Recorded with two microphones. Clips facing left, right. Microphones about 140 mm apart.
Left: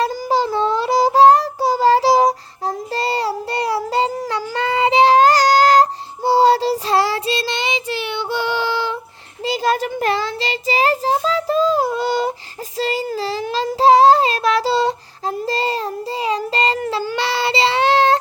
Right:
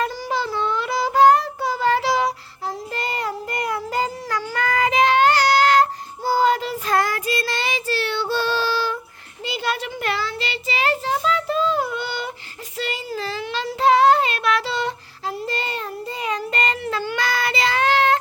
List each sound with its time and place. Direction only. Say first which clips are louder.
0.0 s child singing: left 6 dB; 35° left (ahead or behind); by 9.0 s 20° left (ahead or behind)
9.4 s child singing: left 7 dB; 35° left (ahead or behind)